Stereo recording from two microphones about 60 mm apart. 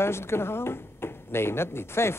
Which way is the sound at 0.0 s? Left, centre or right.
Left.